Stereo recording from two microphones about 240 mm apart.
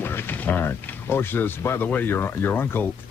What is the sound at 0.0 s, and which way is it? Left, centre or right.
Speech, centre.